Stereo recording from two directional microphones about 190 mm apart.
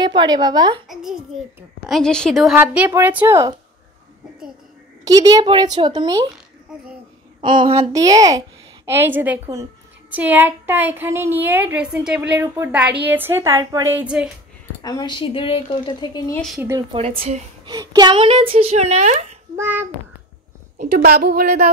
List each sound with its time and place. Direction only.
0.0 s speech: 25° right (ahead or behind)
1.9 s a woman's voice: 5° left (ahead or behind); by 3.5 s 15° right (ahead or behind)
5.0 s speech: 20° right (ahead or behind)
7.4 s a woman's voice: 25° right (ahead or behind)
13.9 s a woman's voice: 5° right (ahead or behind)
14.8 s speech: 20° left (ahead or behind)
17.6 s speech: 20° right (ahead or behind); by 19.2 s 35° right (ahead or behind)
19.5 s a woman's voice: 10° right (ahead or behind)
20.7 s a woman's voice: 55° right (ahead or behind)